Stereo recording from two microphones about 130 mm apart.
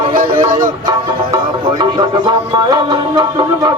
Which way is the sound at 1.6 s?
35° right (ahead or behind).